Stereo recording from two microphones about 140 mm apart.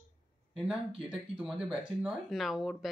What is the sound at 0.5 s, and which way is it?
Speech, 5° right (ahead or behind).